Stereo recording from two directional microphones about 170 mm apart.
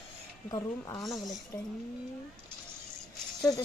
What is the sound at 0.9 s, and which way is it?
Speech, centre (ahead or behind).